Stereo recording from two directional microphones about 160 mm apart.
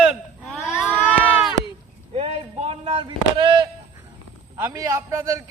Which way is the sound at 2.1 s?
40° right (ahead or behind).